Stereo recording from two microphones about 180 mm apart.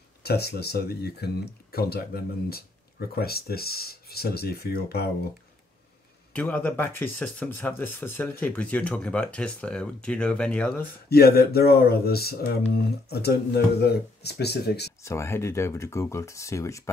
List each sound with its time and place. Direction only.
0.2 s speech: 60° left (ahead or behind)
6.3 s speech: 10° left (ahead or behind)
11.1 s speech: 60° left (ahead or behind)
15.0 s speech: 15° left (ahead or behind)